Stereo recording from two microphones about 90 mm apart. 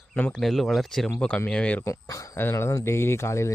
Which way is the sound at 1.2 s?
15° left (ahead or behind).